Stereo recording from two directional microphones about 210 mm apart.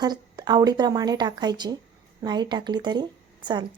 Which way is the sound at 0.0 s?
20° right (ahead or behind).